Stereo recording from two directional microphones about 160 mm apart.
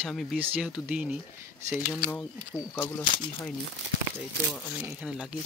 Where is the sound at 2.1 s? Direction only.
15° left (ahead or behind).